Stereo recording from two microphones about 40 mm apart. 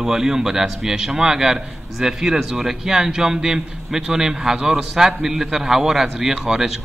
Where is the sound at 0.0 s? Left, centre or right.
Centre.